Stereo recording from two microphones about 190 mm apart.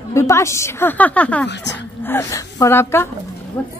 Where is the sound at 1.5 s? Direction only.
65° left (ahead or behind).